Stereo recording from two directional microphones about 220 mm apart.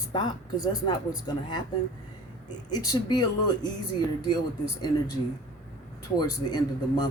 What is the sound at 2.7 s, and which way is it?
Speech, 15° left (ahead or behind).